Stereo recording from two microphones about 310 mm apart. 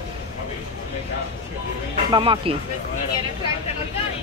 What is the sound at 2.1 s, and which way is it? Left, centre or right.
Speech, centre.